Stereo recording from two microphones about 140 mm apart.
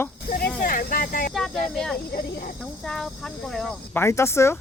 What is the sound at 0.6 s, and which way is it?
Speech, 85° left.